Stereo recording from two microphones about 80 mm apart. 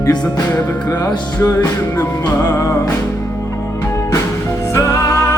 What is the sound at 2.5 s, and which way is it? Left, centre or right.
Music, left.